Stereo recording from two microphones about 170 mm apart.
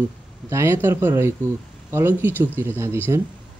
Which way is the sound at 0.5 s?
15° right (ahead or behind).